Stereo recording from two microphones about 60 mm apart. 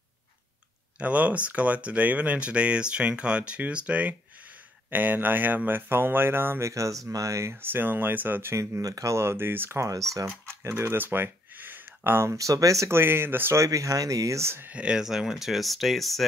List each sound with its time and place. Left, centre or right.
1.0 s speech: right
6.6 s speech: right
7.6 s speech: right
8.8 s speech: right
9.1 s speech: right
12.4 s speech: right
12.9 s speech: right
13.6 s speech: right
14.7 s speech: centre